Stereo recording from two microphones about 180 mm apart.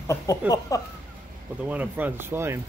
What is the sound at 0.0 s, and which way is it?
Speech, 15° left (ahead or behind).